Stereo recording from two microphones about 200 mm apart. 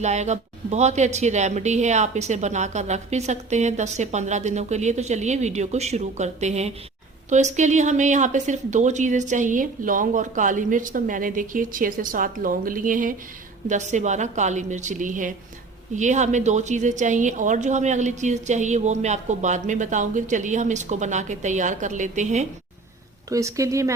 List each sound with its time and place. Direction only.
0.0 s a woman's voice: 35° right (ahead or behind)
23.3 s speech: 15° right (ahead or behind)